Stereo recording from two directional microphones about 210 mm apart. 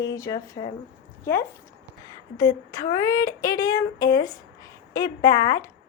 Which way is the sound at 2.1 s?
15° left (ahead or behind).